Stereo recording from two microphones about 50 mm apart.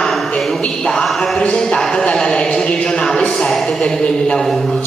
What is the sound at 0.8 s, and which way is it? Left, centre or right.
Speech, centre.